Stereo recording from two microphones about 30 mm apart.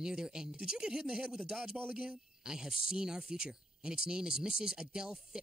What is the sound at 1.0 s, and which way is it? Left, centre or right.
Speech, right.